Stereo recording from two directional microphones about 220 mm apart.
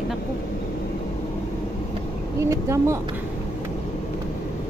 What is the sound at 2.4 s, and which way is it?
Speech, 15° right (ahead or behind).